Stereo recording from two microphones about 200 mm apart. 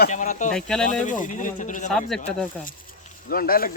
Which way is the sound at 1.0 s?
40° left (ahead or behind).